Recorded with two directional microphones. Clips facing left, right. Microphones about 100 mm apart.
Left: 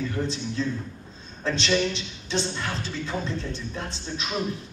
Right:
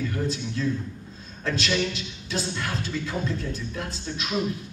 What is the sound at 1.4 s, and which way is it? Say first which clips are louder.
Speech: left 2 dB; 30° left (ahead or behind).